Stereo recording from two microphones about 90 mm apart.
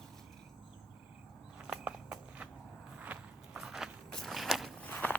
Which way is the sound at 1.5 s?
10° right (ahead or behind).